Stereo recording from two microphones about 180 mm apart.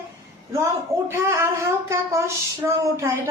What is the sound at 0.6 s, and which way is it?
Speech, 15° right (ahead or behind).